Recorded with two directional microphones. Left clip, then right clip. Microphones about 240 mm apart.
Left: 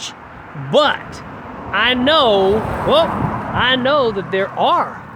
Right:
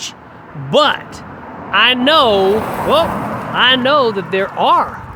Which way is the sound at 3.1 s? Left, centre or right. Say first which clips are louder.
Right 1 dB; right.